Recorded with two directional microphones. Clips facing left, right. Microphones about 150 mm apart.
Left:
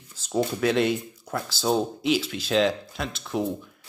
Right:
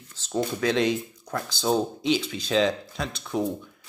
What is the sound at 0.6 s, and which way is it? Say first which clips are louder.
Speech: even; 5° left (ahead or behind).